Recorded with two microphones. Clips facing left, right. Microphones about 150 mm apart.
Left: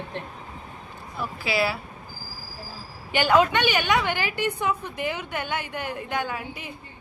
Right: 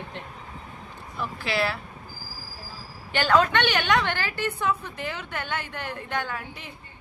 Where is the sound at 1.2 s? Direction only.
10° left (ahead or behind).